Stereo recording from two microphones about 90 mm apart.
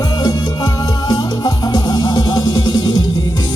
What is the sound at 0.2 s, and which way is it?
Music, 50° left (ahead or behind).